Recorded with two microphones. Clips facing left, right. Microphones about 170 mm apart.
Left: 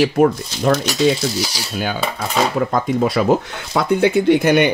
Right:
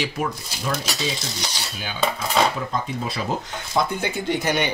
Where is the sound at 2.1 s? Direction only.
65° left (ahead or behind).